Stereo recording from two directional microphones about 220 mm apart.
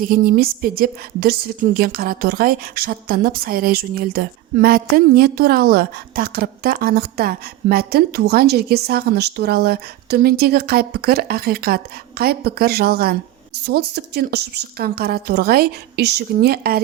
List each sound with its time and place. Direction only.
0.0 s a woman's voice: 40° right (ahead or behind)